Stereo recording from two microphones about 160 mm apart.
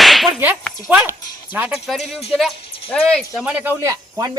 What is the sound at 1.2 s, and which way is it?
Speech, 25° left (ahead or behind).